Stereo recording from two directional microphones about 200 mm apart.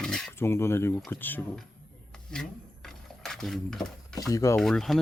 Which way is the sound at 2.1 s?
5° left (ahead or behind).